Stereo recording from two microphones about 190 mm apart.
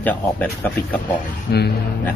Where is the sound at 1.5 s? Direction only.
60° left (ahead or behind).